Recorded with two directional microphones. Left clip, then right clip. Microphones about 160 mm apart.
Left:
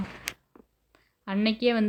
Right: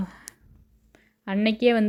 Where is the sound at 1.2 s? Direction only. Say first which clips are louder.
Right 4 dB; 30° right (ahead or behind).